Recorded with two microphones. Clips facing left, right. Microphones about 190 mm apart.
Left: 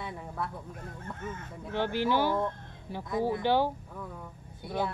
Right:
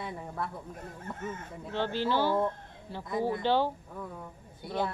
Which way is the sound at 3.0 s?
Centre (ahead or behind).